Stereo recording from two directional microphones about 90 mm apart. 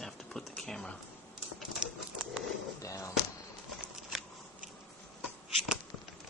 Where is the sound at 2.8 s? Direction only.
35° left (ahead or behind).